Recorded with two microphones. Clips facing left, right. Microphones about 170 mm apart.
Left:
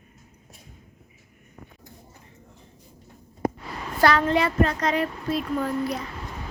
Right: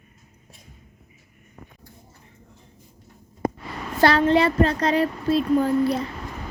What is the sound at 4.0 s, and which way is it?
Speech, 30° right (ahead or behind).